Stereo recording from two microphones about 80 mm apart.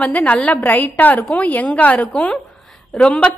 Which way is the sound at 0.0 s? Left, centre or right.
Centre.